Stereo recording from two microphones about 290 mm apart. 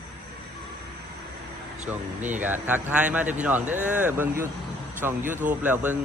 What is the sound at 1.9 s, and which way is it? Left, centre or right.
Speech, centre.